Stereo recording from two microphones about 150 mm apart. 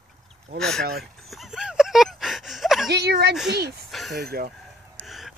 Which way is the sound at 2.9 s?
90° right.